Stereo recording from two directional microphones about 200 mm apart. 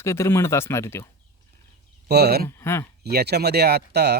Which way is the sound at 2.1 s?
50° right (ahead or behind).